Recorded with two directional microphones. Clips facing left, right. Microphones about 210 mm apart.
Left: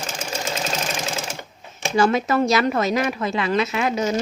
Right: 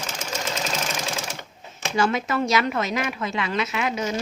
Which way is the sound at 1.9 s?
35° left (ahead or behind).